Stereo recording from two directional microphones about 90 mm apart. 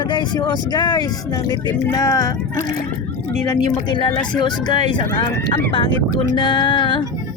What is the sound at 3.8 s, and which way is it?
Speech, 60° left (ahead or behind).